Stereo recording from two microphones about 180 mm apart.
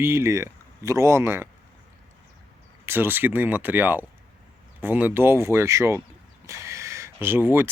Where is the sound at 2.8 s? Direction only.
10° right (ahead or behind).